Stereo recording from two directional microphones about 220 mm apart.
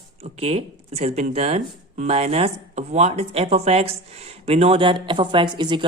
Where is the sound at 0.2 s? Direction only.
30° right (ahead or behind).